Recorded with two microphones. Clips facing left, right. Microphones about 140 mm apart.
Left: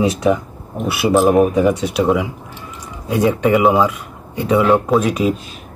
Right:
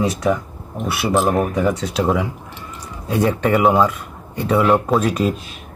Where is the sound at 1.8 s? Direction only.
5° left (ahead or behind).